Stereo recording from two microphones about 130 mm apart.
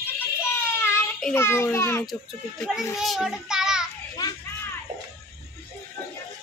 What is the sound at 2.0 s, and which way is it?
A child's voice, centre (ahead or behind).